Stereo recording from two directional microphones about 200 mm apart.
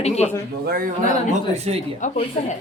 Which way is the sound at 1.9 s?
40° left (ahead or behind).